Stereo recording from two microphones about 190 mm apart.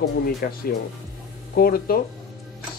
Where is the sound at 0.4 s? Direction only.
55° left (ahead or behind).